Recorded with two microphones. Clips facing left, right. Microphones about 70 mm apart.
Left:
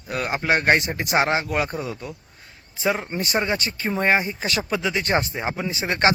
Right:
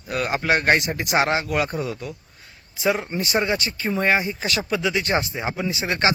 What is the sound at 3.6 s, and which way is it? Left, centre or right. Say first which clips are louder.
Speech: even; left.